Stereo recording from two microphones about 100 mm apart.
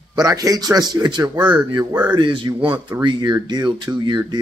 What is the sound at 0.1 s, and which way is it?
Speech, 40° right (ahead or behind).